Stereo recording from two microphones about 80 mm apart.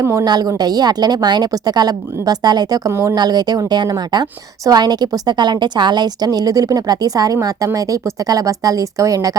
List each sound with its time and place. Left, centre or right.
0.0 s speech: right
0.3 s a woman's voice: right
2.9 s speech: right
3.2 s a woman's voice: right